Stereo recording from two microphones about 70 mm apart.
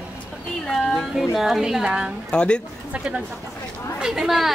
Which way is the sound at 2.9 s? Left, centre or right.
Centre.